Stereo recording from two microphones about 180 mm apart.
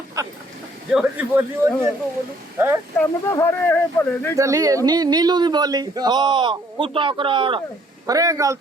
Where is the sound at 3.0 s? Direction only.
15° left (ahead or behind).